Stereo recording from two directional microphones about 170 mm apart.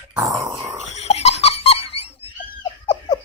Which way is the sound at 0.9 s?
40° left (ahead or behind).